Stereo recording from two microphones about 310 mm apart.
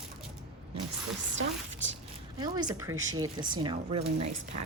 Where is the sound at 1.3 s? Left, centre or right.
Right.